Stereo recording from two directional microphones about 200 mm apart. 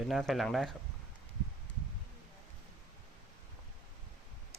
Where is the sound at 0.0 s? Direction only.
Centre (ahead or behind).